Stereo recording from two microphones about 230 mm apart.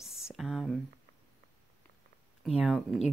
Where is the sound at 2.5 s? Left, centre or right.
Centre.